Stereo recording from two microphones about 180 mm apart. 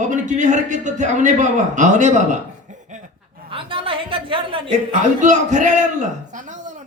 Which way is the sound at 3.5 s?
30° right (ahead or behind).